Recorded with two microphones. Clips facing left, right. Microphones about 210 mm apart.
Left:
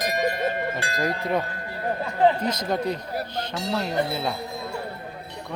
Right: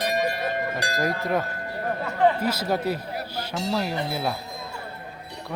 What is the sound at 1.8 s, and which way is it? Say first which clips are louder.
Speech: left 1 dB; 20° left (ahead or behind).